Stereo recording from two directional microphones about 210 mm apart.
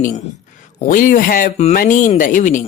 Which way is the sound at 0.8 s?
40° left (ahead or behind).